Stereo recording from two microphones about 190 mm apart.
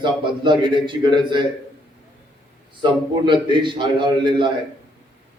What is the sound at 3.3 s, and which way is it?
A man's voice, 25° right (ahead or behind).